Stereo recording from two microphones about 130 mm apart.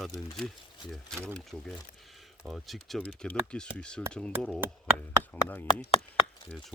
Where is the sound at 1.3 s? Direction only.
Centre (ahead or behind).